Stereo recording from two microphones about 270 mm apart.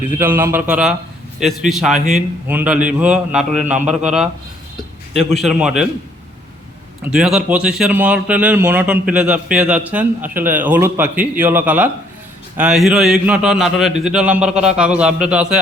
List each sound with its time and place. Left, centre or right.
0.2 s a man's voice: centre
7.0 s a man's voice: centre